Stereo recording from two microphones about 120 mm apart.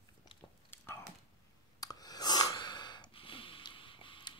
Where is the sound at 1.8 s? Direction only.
35° left (ahead or behind).